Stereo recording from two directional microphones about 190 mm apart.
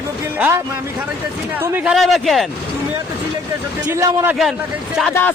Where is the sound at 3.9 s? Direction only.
10° right (ahead or behind).